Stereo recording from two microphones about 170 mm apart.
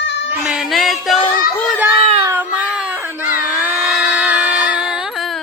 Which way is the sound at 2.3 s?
10° right (ahead or behind).